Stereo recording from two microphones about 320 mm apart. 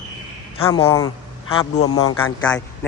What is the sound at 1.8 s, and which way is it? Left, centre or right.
Speech, left.